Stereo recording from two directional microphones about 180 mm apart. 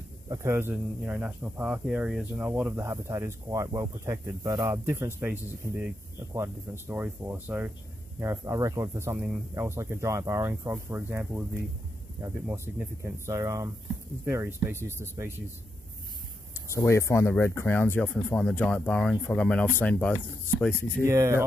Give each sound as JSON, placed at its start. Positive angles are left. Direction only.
{"t": 0.3, "sound": "speech", "side_deg": -15}
{"t": 16.7, "sound": "speech", "side_deg": 15}
{"t": 21.0, "sound": "speech", "side_deg": -15}